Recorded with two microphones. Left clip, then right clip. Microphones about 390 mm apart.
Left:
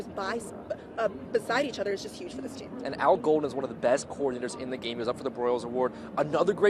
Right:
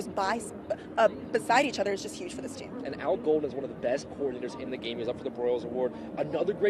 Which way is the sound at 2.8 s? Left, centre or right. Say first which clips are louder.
Left 4 dB; left.